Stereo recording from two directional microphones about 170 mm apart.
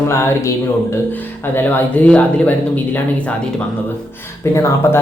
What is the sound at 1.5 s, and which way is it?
Speech, 10° left (ahead or behind).